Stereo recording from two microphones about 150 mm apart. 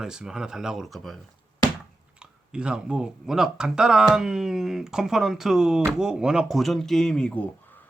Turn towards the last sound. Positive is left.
turn(degrees=10)  # may be behind; listen again after turning